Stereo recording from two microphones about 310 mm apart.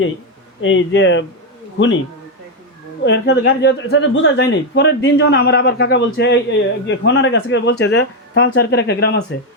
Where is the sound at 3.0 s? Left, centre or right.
Left.